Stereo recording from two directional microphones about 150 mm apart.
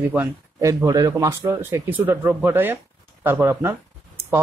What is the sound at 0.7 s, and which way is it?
Speech, 20° right (ahead or behind).